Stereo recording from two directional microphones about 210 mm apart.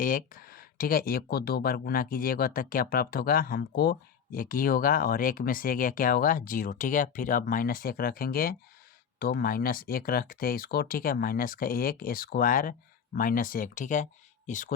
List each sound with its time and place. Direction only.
0.0 s speech: 40° left (ahead or behind)